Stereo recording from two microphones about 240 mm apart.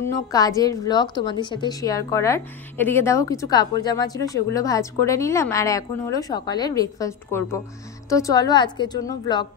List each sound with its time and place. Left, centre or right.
0.0 s a woman's voice: centre